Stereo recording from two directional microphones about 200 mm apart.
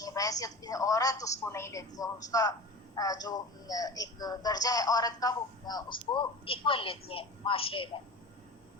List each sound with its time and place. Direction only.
0.0 s a woman's voice: 20° left (ahead or behind)